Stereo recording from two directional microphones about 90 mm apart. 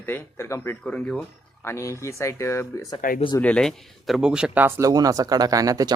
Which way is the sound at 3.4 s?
10° left (ahead or behind).